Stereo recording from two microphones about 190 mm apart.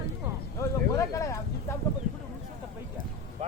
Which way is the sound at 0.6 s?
15° left (ahead or behind).